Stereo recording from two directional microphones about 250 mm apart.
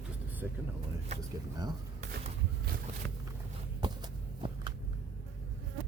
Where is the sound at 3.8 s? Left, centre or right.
Centre.